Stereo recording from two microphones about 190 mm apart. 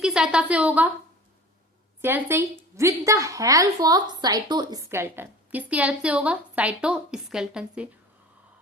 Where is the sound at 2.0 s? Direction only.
10° right (ahead or behind).